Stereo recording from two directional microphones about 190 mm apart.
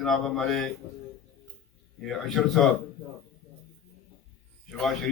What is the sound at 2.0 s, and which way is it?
Speech, centre (ahead or behind).